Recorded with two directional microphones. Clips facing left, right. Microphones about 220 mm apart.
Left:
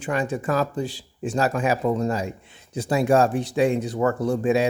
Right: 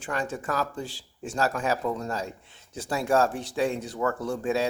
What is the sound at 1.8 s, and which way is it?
Speech, 25° left (ahead or behind).